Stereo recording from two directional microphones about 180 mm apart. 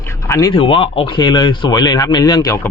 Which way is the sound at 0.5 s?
30° left (ahead or behind).